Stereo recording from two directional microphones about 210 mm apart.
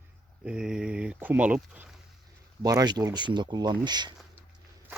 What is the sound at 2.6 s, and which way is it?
Speech, 15° right (ahead or behind).